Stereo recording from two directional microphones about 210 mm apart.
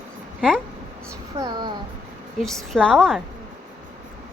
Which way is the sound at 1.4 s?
20° right (ahead or behind).